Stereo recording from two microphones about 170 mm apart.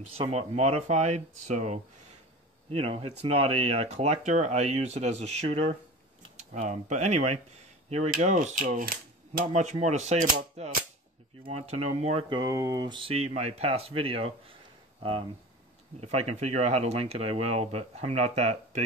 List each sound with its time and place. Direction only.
0.0 s speech: 35° right (ahead or behind)
6.3 s speech: 45° right (ahead or behind)
11.4 s speech: 35° right (ahead or behind)
12.3 s speech: 20° right (ahead or behind)
16.0 s speech: 40° right (ahead or behind)